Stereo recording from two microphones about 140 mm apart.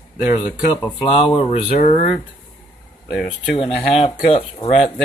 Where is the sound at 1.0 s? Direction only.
45° left (ahead or behind).